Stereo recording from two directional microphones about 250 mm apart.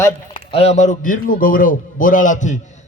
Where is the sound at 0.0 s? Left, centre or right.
Left.